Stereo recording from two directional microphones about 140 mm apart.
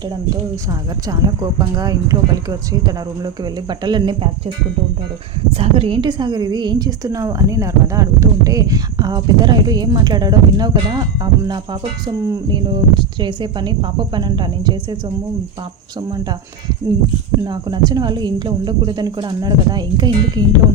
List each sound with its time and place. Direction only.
0.7 s speech: 25° right (ahead or behind)
17.4 s speech: 30° right (ahead or behind)